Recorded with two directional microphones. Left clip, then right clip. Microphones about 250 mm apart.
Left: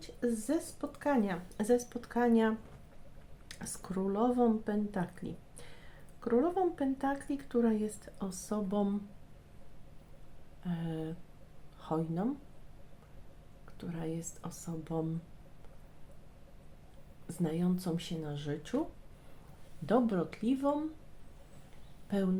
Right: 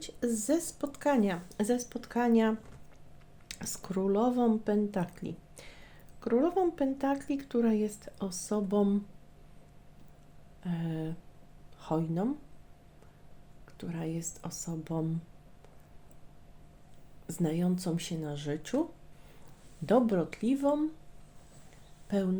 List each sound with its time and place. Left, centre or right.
0.0 s speech: right
10.6 s speech: right
13.7 s speech: right
17.2 s speech: right
19.8 s speech: right
22.1 s speech: centre